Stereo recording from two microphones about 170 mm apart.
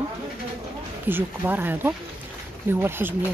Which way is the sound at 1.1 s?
10° right (ahead or behind).